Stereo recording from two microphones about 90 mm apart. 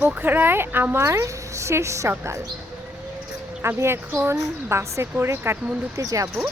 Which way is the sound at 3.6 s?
30° right (ahead or behind).